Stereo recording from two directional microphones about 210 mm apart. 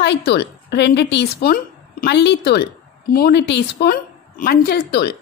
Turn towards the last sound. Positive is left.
turn(degrees=50)  # may be behind; listen again after turning